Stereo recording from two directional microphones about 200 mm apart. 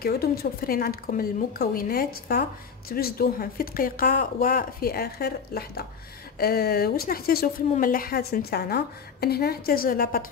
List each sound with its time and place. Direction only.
0.0 s speech: 50° left (ahead or behind)